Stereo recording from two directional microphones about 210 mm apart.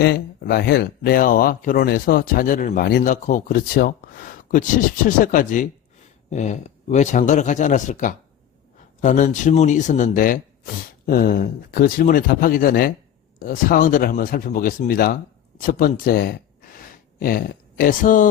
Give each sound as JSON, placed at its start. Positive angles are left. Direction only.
{"t": 0.0, "sound": "speech", "side_deg": 50}